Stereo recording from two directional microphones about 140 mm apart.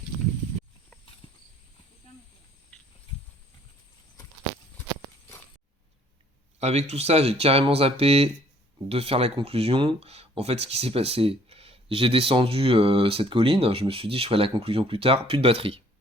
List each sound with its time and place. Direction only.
1.2 s clip-clop: 35° left (ahead or behind)
6.6 s speech: 50° right (ahead or behind)